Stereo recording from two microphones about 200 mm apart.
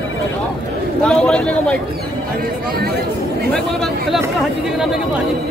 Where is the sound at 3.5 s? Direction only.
Centre (ahead or behind).